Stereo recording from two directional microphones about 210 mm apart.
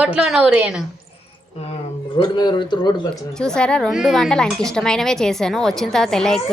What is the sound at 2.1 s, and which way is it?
Speech, 20° left (ahead or behind).